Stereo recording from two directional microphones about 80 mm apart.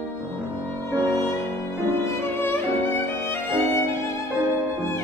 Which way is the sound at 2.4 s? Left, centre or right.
Left.